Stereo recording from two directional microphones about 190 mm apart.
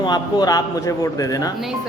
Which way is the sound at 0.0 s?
20° left (ahead or behind).